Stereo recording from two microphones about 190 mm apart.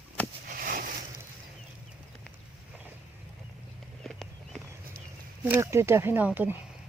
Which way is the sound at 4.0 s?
Centre (ahead or behind).